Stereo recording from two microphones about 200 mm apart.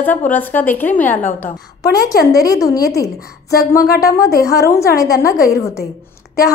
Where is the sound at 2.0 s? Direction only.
50° left (ahead or behind).